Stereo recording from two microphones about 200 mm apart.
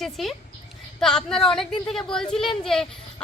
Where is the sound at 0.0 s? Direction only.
Centre (ahead or behind).